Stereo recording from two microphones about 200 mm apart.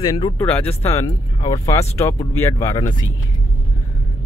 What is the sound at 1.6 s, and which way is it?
Speech, 15° left (ahead or behind).